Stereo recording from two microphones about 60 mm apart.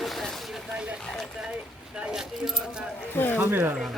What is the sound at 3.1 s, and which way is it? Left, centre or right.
Speech, left.